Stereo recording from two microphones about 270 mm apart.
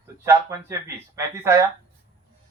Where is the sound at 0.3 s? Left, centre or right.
Centre.